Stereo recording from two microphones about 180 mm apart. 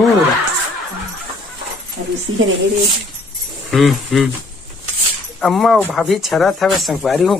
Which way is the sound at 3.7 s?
Centre (ahead or behind).